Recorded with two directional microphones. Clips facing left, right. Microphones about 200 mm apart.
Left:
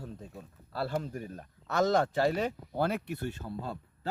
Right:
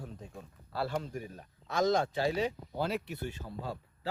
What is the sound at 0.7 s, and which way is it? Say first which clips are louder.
Speech: left 1 dB; 45° left (ahead or behind).